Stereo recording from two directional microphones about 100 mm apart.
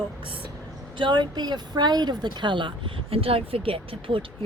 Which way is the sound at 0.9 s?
50° right (ahead or behind).